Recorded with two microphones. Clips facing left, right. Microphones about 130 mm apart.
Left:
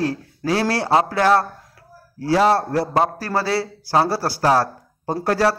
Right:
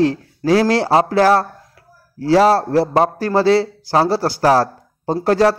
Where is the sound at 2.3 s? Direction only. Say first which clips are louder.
Right 4 dB; 30° right (ahead or behind).